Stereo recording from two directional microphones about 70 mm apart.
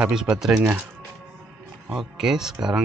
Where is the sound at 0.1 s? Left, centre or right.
Centre.